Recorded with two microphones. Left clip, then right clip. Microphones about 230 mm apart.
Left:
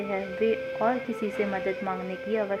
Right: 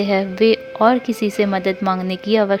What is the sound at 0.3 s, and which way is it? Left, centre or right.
Speech, right.